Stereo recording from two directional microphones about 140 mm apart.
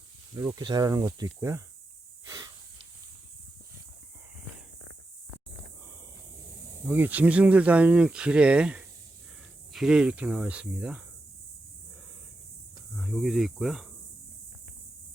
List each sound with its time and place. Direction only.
0.3 s speech: 30° right (ahead or behind)
2.2 s a sound: 25° right (ahead or behind)
6.8 s speech: 15° right (ahead or behind)
12.9 s speech: centre (ahead or behind)